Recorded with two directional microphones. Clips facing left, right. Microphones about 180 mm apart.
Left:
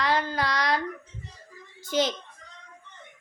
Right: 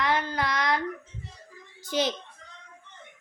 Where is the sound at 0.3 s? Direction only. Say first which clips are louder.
Left 1 dB; 20° right (ahead or behind).